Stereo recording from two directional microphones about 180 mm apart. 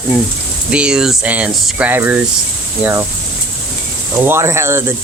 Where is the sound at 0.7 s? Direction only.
5° right (ahead or behind).